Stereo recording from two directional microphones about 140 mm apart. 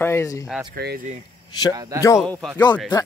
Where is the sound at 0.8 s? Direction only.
90° right.